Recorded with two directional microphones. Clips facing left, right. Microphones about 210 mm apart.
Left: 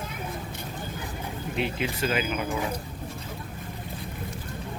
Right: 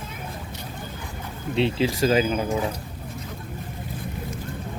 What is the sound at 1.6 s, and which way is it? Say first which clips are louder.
Speech: right 7 dB; 30° right (ahead or behind).